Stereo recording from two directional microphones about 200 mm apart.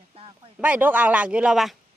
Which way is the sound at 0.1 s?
30° right (ahead or behind).